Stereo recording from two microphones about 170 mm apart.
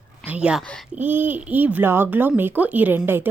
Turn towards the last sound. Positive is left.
turn(degrees=-10)  # may be behind; listen again after turning